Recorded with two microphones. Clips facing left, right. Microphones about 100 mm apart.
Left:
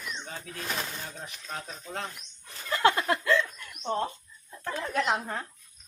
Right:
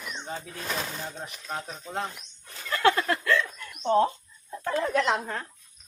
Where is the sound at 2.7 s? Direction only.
20° left (ahead or behind).